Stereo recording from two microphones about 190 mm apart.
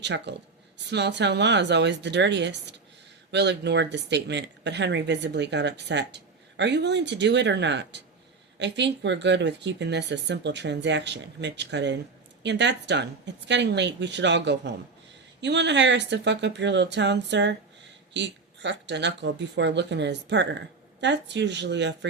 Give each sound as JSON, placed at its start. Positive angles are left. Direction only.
{"t": 0.0, "sound": "speech", "side_deg": -65}